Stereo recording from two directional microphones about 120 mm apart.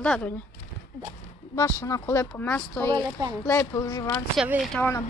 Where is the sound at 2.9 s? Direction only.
30° right (ahead or behind).